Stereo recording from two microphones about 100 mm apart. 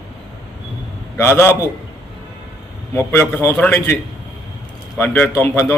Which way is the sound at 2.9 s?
20° left (ahead or behind).